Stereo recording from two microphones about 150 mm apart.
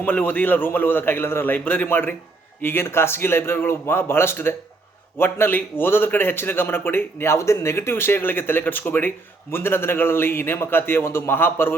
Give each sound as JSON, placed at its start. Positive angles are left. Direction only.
{"t": 0.0, "sound": "a man's voice", "side_deg": 10}